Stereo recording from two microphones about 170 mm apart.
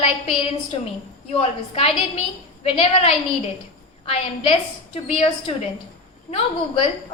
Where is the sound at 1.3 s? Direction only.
35° left (ahead or behind).